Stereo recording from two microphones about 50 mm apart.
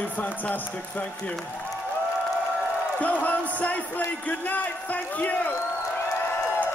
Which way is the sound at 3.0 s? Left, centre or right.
Left.